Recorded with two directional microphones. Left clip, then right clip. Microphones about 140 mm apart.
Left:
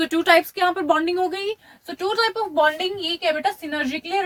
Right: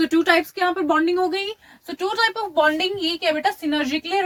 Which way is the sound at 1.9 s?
20° left (ahead or behind).